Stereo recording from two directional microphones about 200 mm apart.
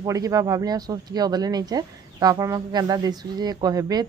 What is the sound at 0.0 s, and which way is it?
Speech, 15° right (ahead or behind).